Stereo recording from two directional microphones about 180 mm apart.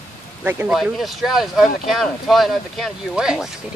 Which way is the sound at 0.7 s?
Centre (ahead or behind).